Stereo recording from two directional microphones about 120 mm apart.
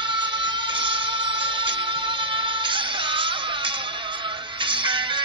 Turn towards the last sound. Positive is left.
turn(degrees=-40)  # may be behind; listen again after turning